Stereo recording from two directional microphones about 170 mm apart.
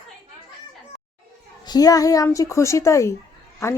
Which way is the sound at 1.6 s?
20° left (ahead or behind).